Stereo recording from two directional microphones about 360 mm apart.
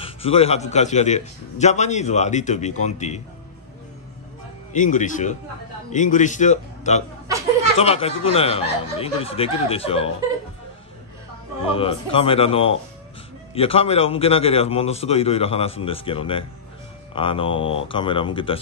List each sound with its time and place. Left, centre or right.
0.0 s a man's voice: centre
4.7 s a man's voice: left
7.2 s a sound: centre
7.8 s a man's voice: centre
11.6 s a man's voice: centre